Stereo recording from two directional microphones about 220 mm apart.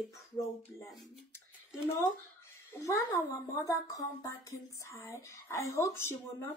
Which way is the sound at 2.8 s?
15° left (ahead or behind).